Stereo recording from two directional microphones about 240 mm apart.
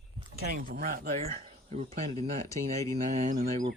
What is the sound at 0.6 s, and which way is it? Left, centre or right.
Speech, right.